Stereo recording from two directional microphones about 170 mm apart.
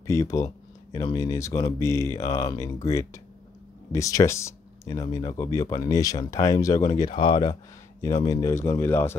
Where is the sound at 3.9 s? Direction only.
20° left (ahead or behind).